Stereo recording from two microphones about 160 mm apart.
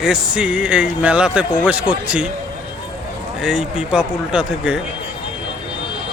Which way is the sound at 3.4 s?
Centre (ahead or behind).